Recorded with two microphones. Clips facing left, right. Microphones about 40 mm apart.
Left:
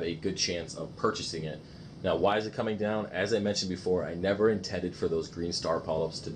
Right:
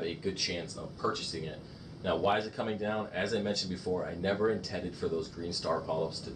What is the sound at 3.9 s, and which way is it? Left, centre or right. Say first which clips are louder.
Speech: left 4 dB; centre.